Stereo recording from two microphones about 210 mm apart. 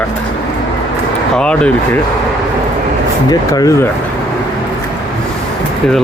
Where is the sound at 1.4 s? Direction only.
5° left (ahead or behind).